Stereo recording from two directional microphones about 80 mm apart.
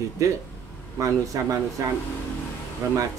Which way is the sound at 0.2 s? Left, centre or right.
Right.